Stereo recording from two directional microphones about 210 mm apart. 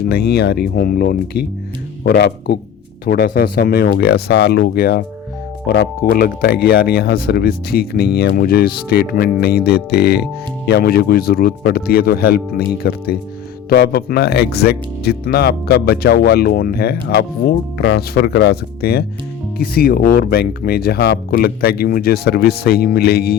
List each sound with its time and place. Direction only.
0.0 s speech: 50° left (ahead or behind)